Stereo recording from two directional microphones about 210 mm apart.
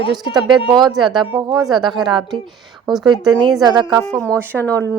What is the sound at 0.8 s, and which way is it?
A woman's voice, centre (ahead or behind).